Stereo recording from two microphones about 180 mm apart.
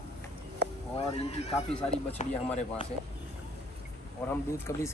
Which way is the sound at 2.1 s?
40° left (ahead or behind).